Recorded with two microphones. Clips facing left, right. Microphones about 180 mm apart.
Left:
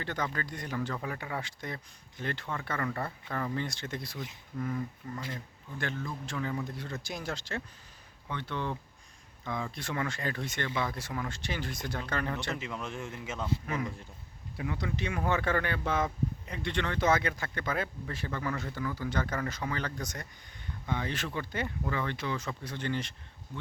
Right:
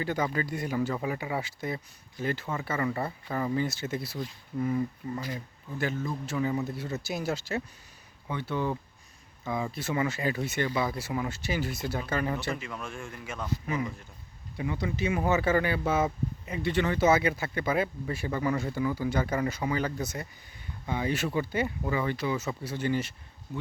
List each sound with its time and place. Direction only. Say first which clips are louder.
0.0 s speech: right 6 dB; 10° right (ahead or behind)
12.5 s speech: left 1 dB; 20° left (ahead or behind)
13.7 s speech: right 3 dB; 5° right (ahead or behind)